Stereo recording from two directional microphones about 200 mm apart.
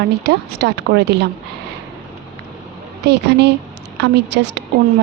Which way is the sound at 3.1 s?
55° right (ahead or behind).